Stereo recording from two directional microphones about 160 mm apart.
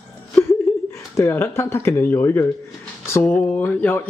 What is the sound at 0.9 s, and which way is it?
Speech, 15° left (ahead or behind).